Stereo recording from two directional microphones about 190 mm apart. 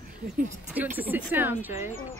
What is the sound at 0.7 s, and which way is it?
Speech, 10° right (ahead or behind).